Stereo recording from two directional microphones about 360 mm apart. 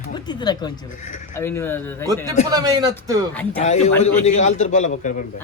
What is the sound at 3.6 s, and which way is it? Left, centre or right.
A man's voice, centre.